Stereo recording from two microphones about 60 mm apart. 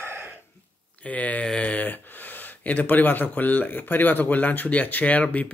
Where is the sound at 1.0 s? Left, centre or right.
Left.